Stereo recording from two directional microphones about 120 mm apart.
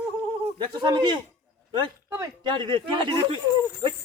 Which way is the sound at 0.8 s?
40° right (ahead or behind).